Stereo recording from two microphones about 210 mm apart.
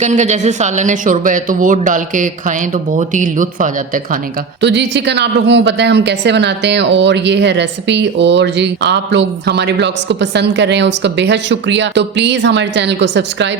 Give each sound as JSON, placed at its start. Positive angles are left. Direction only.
{"t": 0.0, "sound": "speech", "side_deg": -35}
{"t": 4.6, "sound": "a woman's voice", "side_deg": -55}